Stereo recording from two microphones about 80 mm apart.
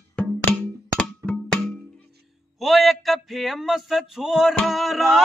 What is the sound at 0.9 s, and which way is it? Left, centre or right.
Music, centre.